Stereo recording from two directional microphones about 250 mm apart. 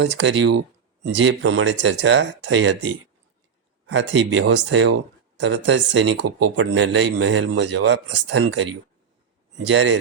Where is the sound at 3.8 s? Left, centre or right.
Right.